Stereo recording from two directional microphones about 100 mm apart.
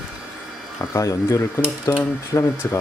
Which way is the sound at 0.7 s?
30° left (ahead or behind).